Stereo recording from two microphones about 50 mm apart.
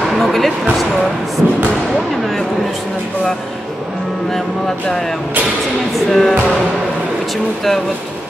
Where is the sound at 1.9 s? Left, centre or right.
Centre.